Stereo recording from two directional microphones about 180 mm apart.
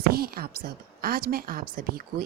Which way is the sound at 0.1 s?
55° right (ahead or behind).